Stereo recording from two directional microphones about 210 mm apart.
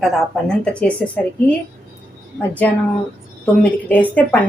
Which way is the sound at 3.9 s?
10° left (ahead or behind).